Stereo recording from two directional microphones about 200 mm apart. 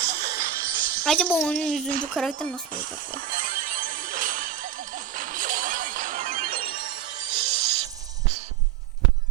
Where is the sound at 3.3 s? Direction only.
40° right (ahead or behind).